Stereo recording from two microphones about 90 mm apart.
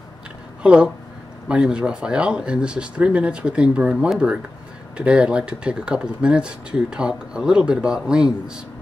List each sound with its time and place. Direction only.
0.6 s speech: 10° right (ahead or behind)